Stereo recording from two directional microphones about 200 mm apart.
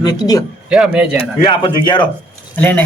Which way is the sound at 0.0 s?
20° left (ahead or behind).